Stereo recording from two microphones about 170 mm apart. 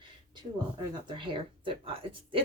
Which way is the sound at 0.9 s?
25° right (ahead or behind).